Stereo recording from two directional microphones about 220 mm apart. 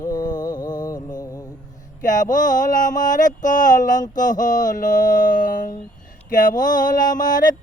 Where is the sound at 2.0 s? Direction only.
35° left (ahead or behind).